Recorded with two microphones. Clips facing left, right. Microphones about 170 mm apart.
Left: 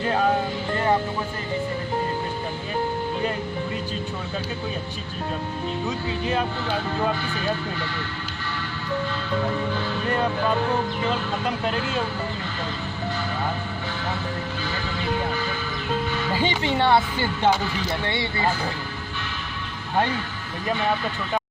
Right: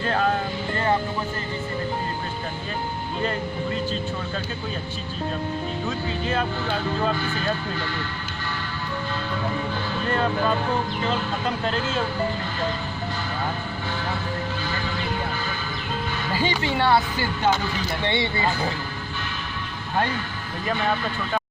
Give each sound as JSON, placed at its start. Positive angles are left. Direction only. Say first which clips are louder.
{"t": 0.0, "sound": "speech", "louder": "left 1 dB", "side_deg": 15}
{"t": 16.4, "sound": "speech", "louder": "even", "side_deg": 20}
{"t": 18.0, "sound": "speech", "louder": "right 3 dB", "side_deg": -25}